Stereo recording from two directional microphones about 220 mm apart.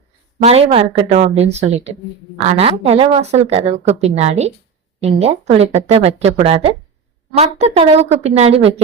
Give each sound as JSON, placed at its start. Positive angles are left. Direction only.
{"t": 0.4, "sound": "a woman's voice", "side_deg": -25}